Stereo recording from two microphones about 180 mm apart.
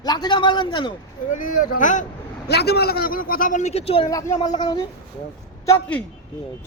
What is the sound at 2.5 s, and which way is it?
A man's voice, 65° left (ahead or behind).